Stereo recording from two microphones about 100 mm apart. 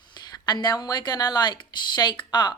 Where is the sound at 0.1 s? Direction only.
45° left (ahead or behind).